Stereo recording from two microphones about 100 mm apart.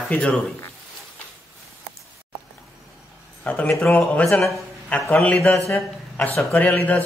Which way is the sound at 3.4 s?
15° left (ahead or behind).